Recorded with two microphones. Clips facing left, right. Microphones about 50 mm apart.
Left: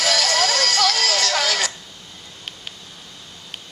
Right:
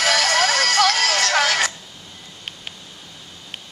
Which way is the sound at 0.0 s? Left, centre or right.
Centre.